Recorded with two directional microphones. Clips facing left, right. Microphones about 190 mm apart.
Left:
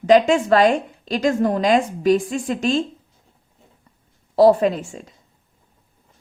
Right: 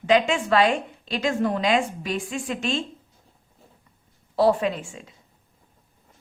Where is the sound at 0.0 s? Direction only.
40° left (ahead or behind).